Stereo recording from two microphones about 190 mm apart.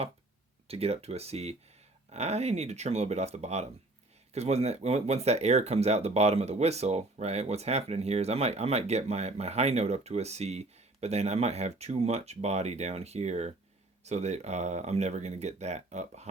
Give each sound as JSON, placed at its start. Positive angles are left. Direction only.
{"t": 0.7, "sound": "speech", "side_deg": -30}